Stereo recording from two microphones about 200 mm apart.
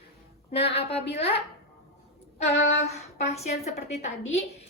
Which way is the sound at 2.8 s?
30° left (ahead or behind).